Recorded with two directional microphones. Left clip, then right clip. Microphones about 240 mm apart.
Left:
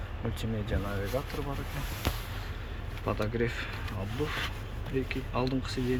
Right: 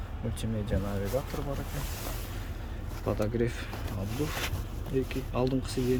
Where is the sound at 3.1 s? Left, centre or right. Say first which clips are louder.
Right 1 dB; centre.